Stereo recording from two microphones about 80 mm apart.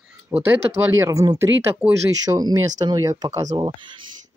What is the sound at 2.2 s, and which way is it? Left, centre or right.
Speech, right.